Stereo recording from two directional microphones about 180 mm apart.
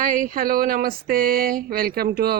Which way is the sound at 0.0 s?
45° right (ahead or behind).